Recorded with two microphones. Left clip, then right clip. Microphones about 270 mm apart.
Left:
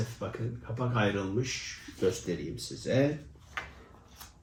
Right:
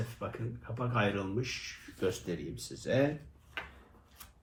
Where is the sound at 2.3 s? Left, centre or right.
Centre.